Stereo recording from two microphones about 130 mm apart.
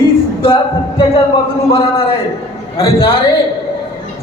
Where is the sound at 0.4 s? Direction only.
40° left (ahead or behind).